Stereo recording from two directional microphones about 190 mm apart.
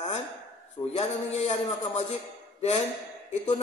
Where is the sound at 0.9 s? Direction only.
35° left (ahead or behind).